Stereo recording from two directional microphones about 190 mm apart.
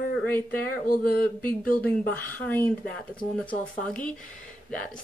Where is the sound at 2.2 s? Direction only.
10° left (ahead or behind).